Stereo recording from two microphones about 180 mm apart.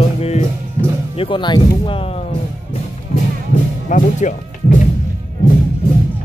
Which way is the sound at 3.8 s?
45° left (ahead or behind).